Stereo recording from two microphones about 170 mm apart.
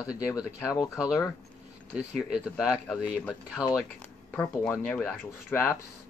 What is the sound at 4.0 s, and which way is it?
Speech, 5° left (ahead or behind).